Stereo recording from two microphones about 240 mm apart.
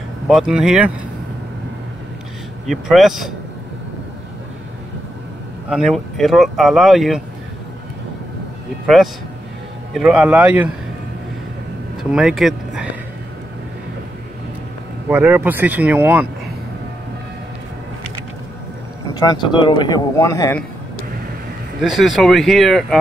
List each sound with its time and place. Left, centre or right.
0.3 s speech: centre
2.6 s speech: centre
5.7 s speech: centre
8.8 s a man's voice: centre
12.0 s speech: centre
15.0 s speech: centre
19.1 s speech: centre
21.8 s speech: centre